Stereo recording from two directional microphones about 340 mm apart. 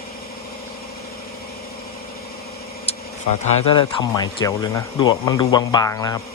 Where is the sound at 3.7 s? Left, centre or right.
Centre.